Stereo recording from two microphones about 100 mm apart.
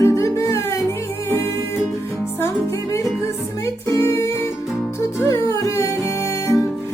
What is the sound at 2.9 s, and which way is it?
Music, 30° left (ahead or behind).